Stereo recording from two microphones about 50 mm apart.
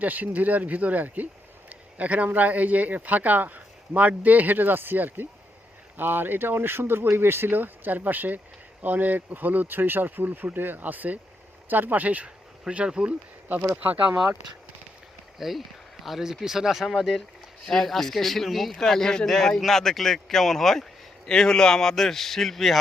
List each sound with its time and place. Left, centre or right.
0.0 s speech: right
12.7 s speech: right
15.4 s speech: centre